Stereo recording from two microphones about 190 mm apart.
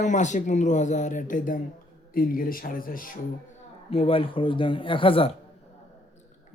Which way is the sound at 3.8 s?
30° left (ahead or behind).